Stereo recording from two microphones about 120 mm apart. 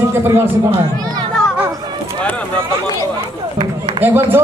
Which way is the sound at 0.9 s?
35° right (ahead or behind).